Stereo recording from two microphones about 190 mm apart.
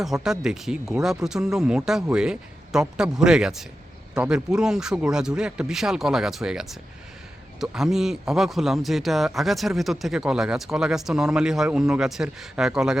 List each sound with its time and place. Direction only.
0.0 s a man's voice: centre (ahead or behind)